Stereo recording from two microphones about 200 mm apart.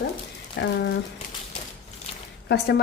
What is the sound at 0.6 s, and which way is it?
Speech, 60° left (ahead or behind).